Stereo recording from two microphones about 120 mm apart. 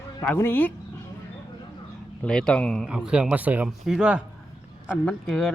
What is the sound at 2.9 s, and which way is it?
Speech, 5° right (ahead or behind).